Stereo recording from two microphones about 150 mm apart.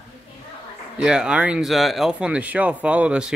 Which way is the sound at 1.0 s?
5° right (ahead or behind).